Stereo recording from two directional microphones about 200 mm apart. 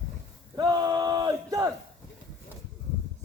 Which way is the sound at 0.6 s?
20° right (ahead or behind).